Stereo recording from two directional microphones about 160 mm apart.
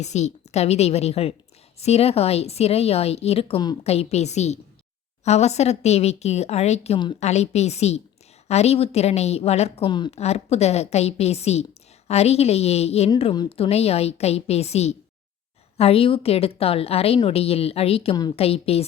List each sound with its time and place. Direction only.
0.0 s a woman's voice: 45° left (ahead or behind)
7.2 s a woman's voice: 45° left (ahead or behind)
10.1 s a woman's voice: 40° left (ahead or behind)
13.3 s speech: 25° left (ahead or behind)
13.7 s a woman's voice: 40° left (ahead or behind)